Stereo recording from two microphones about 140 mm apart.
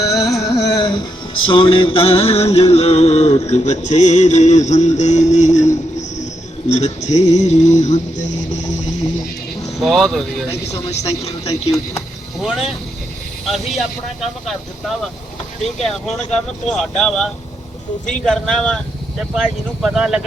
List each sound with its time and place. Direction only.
0.5 s music: 25° left (ahead or behind)
1.5 s music: 40° left (ahead or behind); by 6.2 s 60° left (ahead or behind)
6.7 s a sound: 55° left (ahead or behind)
9.8 s speech: centre (ahead or behind)
10.5 s speech: 20° left (ahead or behind)
10.8 s music: 50° left (ahead or behind)
12.4 s speech: centre (ahead or behind)
15.8 s speech: 5° left (ahead or behind)